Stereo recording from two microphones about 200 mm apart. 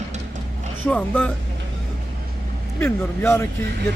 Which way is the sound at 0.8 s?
5° left (ahead or behind).